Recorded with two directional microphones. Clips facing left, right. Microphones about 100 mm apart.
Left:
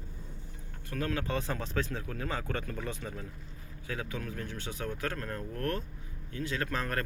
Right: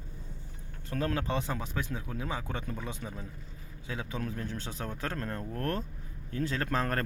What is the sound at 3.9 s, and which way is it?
A man's voice, 25° right (ahead or behind).